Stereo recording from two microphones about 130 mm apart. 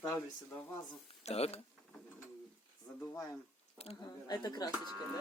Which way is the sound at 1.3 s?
50° left (ahead or behind).